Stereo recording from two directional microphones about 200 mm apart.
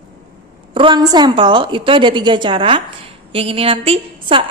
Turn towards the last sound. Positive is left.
turn(degrees=-25)  # may be behind; listen again after turning